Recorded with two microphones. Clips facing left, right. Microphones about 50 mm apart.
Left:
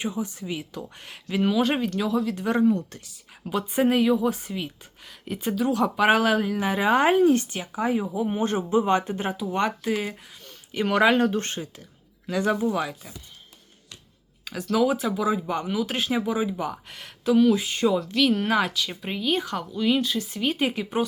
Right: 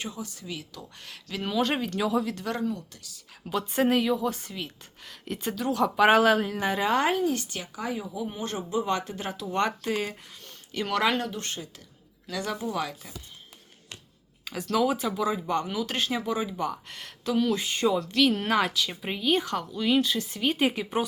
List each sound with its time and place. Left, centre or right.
0.0 s speech: left
1.5 s speech: centre
2.3 s speech: left
2.7 s speech: left
3.4 s a woman's voice: centre; by 9.3 s left
9.4 s a woman's voice: centre
10.7 s a woman's voice: centre
11.2 s a woman's voice: left; by 13.1 s centre
14.4 s speech: centre